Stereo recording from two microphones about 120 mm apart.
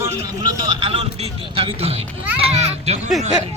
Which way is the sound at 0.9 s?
55° right (ahead or behind).